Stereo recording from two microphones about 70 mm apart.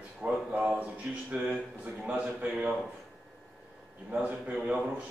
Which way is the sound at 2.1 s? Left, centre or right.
Centre.